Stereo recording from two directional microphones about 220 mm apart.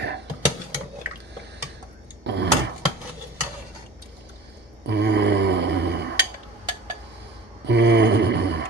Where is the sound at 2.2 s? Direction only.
50° right (ahead or behind).